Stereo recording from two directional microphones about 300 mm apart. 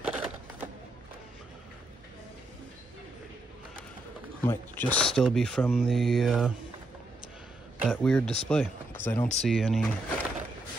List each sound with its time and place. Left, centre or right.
0.0 s a sound: centre
4.5 s speech: centre
7.8 s speech: centre